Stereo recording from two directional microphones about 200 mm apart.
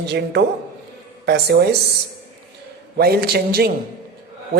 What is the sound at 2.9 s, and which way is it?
Speech, 50° right (ahead or behind).